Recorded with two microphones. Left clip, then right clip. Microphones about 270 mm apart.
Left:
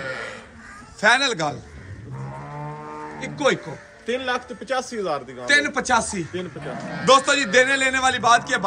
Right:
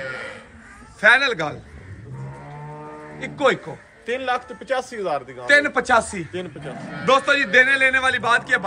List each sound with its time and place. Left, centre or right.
0.0 s a sound: left
1.0 s a man's voice: centre
3.2 s a man's voice: centre
4.0 s a man's voice: right
5.5 s a man's voice: centre